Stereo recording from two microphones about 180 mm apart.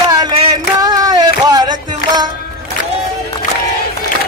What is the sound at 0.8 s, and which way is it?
Music, 20° right (ahead or behind).